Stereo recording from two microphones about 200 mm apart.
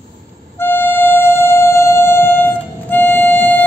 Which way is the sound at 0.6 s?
10° left (ahead or behind).